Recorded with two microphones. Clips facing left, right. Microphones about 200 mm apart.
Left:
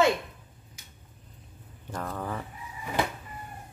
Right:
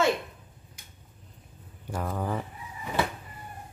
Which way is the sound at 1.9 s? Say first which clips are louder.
Right 3 dB; 10° right (ahead or behind).